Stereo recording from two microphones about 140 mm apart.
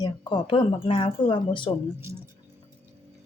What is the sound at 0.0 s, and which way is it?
Speech, 30° left (ahead or behind).